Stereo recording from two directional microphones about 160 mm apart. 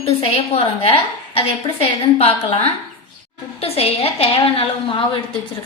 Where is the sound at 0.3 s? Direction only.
35° left (ahead or behind).